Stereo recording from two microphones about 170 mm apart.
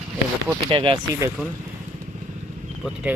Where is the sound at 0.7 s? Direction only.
30° right (ahead or behind).